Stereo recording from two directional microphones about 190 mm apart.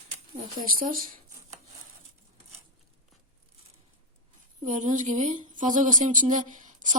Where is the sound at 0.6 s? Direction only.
45° right (ahead or behind).